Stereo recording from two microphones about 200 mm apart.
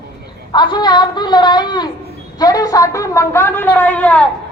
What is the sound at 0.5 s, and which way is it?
A woman's voice, 20° left (ahead or behind).